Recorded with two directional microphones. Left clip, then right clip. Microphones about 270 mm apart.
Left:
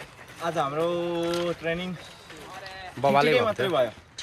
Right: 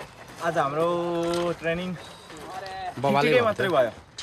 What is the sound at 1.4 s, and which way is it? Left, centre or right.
Speech, centre.